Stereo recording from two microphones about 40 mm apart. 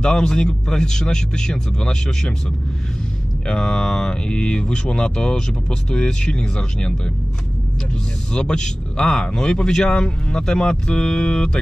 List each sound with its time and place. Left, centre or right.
0.0 s speech: left
3.4 s speech: left
8.3 s speech: left